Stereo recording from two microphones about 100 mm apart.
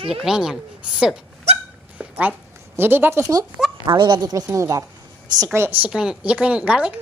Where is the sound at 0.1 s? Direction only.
5° right (ahead or behind).